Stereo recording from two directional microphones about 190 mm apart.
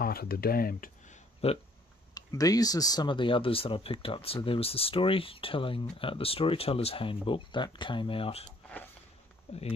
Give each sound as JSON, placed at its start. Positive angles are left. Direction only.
{"t": 0.0, "sound": "speech", "side_deg": 55}
{"t": 2.1, "sound": "speech", "side_deg": 20}
{"t": 8.5, "sound": "a sound", "side_deg": 5}
{"t": 9.5, "sound": "speech", "side_deg": 30}